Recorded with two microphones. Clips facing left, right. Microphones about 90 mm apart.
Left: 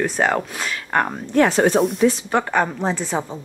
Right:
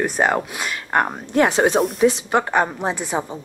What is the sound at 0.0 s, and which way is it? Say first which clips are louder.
A woman's voice: even; 10° right (ahead or behind).